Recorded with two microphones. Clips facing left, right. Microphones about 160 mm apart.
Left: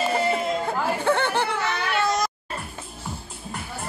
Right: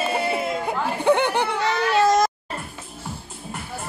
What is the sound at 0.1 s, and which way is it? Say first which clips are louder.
Chatter: left 1 dB; 10° right (ahead or behind).